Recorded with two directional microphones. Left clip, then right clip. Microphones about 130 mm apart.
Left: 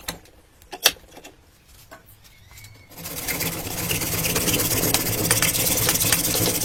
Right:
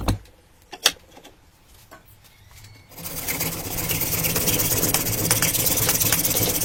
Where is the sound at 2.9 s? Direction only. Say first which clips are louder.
Left 1 dB; 10° left (ahead or behind).